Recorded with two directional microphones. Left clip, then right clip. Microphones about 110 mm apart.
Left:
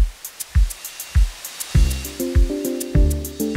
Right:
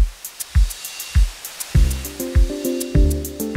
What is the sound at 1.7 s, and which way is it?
Music, 15° left (ahead or behind).